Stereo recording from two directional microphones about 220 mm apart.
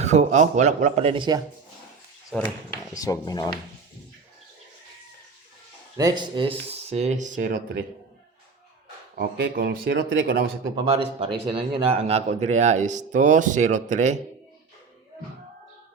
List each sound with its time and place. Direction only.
0.0 s speech: 30° right (ahead or behind)
2.3 s speech: 5° left (ahead or behind)
3.0 s speech: 15° left (ahead or behind)
6.0 s speech: 20° right (ahead or behind); by 7.9 s 40° right (ahead or behind)
9.1 s speech: 45° right (ahead or behind)
10.8 s speech: 25° right (ahead or behind)